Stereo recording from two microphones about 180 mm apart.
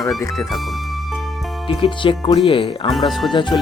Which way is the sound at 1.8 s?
25° left (ahead or behind).